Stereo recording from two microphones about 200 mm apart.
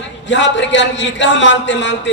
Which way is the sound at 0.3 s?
65° left (ahead or behind).